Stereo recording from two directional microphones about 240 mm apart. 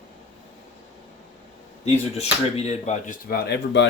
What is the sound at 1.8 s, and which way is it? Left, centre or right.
Speech, left.